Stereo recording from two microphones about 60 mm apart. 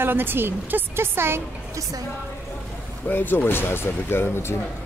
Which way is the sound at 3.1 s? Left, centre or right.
Left.